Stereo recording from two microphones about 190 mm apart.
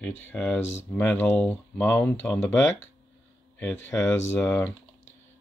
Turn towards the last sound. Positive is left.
turn(degrees=10)  # may be behind; listen again after turning